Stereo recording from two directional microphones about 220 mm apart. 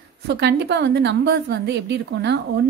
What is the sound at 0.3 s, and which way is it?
A woman's voice, 50° right (ahead or behind).